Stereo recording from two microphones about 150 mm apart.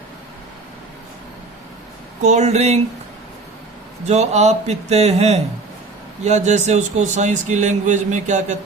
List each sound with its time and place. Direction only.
2.2 s speech: 50° right (ahead or behind)
4.0 s speech: 50° right (ahead or behind)